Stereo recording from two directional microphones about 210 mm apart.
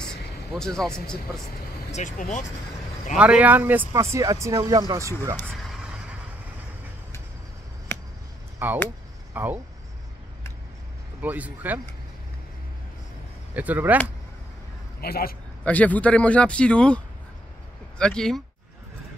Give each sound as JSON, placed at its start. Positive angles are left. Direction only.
{"t": 0.6, "sound": "a man's voice", "side_deg": 0}
{"t": 1.9, "sound": "speech", "side_deg": 35}
{"t": 3.2, "sound": "speech", "side_deg": -5}
{"t": 8.6, "sound": "speech", "side_deg": -10}
{"t": 11.1, "sound": "speech", "side_deg": -5}
{"t": 13.6, "sound": "speech", "side_deg": -5}
{"t": 15.0, "sound": "speech", "side_deg": 45}
{"t": 15.6, "sound": "a man's voice", "side_deg": 5}